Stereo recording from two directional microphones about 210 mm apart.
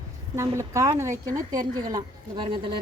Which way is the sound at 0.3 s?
15° right (ahead or behind).